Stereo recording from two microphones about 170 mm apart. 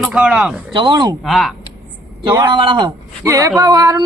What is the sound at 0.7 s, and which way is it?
Speech, 30° right (ahead or behind).